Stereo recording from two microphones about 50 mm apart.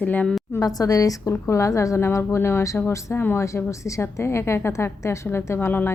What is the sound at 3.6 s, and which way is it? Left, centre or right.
A woman's voice, left.